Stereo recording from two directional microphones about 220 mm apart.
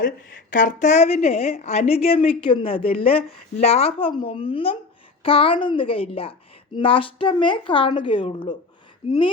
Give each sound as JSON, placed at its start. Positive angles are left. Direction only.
{"t": 0.0, "sound": "speech", "side_deg": 35}